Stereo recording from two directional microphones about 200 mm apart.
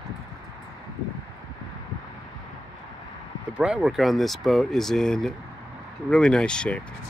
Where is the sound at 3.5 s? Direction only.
5° right (ahead or behind).